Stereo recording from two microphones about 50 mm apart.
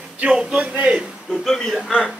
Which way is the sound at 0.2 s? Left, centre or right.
Centre.